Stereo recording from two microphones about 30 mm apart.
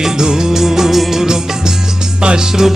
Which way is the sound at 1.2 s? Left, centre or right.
Right.